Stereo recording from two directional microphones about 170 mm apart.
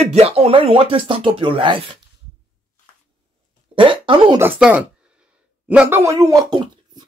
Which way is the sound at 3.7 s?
30° right (ahead or behind).